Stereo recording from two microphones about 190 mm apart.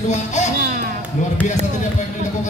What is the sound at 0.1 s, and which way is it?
Speech, 40° left (ahead or behind).